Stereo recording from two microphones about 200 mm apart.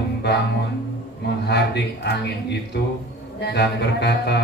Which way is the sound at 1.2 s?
55° left (ahead or behind).